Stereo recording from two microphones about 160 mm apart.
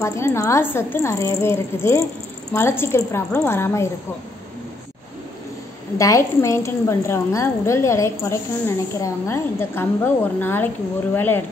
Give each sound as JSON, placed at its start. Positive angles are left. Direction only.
{"t": 0.0, "sound": "a woman's voice", "side_deg": 15}
{"t": 5.9, "sound": "a woman's voice", "side_deg": 20}